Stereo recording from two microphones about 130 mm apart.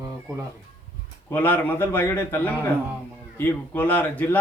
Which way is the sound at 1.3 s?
15° left (ahead or behind).